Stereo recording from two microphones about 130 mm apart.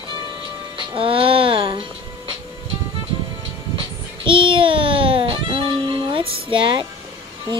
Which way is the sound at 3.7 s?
45° right (ahead or behind).